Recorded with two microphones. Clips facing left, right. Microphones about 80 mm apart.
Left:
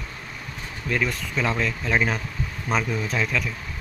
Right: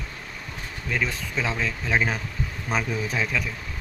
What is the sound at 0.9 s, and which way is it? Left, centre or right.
Speech, centre.